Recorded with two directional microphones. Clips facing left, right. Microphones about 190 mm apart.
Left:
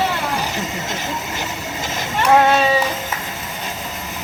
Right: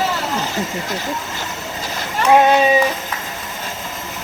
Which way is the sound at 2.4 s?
15° right (ahead or behind).